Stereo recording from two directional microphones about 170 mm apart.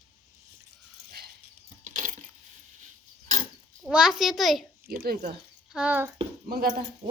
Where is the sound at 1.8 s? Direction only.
50° right (ahead or behind).